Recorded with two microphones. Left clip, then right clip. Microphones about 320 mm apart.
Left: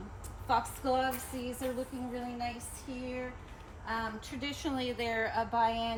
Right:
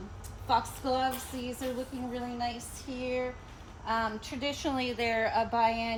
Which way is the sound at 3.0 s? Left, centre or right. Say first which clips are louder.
Right 8 dB; centre.